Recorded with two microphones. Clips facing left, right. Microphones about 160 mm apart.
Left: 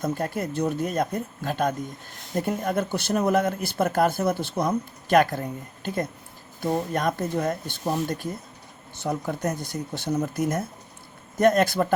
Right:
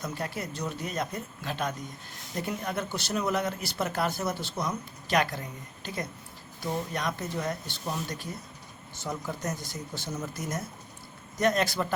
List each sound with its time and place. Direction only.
0.0 s speech: 50° left (ahead or behind)